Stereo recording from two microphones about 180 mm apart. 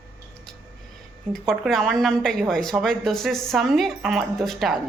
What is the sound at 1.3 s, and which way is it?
A woman's voice, centre (ahead or behind).